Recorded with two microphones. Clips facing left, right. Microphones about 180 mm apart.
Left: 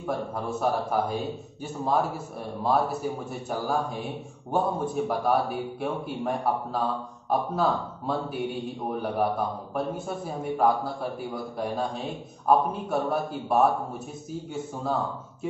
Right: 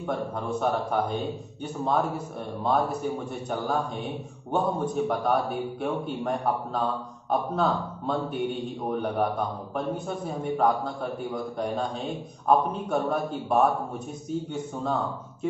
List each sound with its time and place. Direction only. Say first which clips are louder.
0.0 s a man's voice: even; 5° left (ahead or behind)